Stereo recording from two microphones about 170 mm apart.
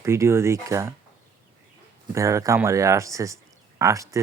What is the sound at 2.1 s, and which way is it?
Speech, 20° right (ahead or behind).